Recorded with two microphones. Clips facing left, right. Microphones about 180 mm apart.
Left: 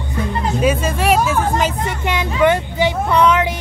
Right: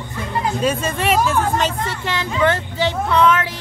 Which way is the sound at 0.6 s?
5° left (ahead or behind).